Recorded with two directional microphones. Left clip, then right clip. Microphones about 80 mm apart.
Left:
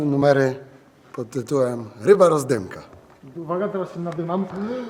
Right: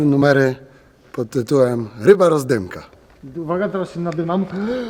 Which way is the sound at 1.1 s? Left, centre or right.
Right.